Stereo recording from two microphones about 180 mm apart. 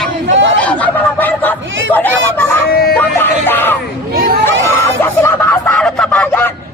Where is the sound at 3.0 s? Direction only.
10° left (ahead or behind).